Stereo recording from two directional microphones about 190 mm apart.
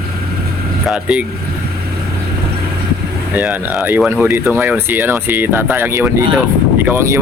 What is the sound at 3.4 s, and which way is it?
Speech, 5° right (ahead or behind).